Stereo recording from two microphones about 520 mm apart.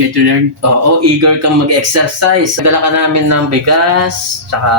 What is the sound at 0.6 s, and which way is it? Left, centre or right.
Speech, right.